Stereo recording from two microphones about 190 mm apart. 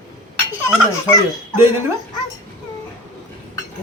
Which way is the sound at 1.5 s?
15° right (ahead or behind).